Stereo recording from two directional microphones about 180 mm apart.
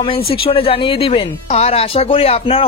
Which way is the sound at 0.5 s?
30° left (ahead or behind).